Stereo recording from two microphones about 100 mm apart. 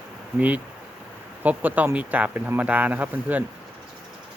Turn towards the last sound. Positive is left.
turn(degrees=-15)  # may be behind; listen again after turning